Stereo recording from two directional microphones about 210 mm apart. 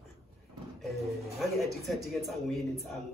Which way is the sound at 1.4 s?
Centre (ahead or behind).